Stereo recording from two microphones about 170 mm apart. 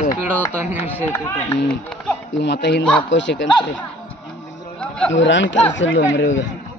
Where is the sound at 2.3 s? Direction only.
90° left.